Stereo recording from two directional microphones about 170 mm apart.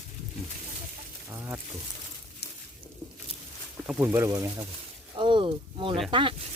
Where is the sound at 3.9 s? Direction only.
15° right (ahead or behind); by 6.3 s 30° right (ahead or behind).